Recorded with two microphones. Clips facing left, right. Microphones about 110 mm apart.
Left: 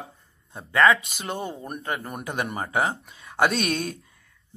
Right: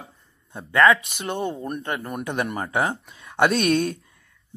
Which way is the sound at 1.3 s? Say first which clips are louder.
Right 4 dB; 5° left (ahead or behind).